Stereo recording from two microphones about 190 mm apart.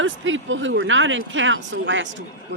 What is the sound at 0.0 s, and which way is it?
Speech, 90° right.